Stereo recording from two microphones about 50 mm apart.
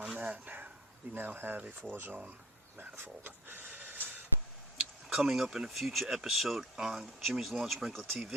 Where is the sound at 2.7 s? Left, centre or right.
Right.